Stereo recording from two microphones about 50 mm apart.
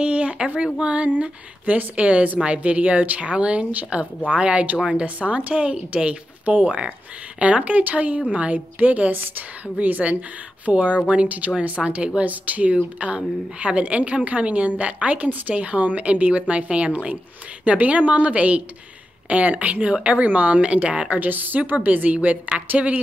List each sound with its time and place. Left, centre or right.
0.0 s a sound: right
0.7 s a woman's voice: right
21.2 s a woman's voice: right